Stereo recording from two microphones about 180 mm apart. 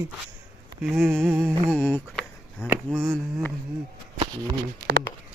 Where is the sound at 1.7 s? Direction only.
5° left (ahead or behind).